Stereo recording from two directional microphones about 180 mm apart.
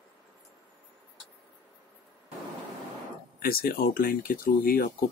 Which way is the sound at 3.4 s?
55° left (ahead or behind).